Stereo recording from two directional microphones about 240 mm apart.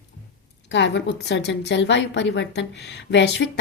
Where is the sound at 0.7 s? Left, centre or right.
Left.